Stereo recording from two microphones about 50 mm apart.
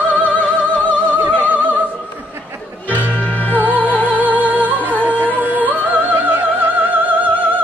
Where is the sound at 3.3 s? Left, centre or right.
Left.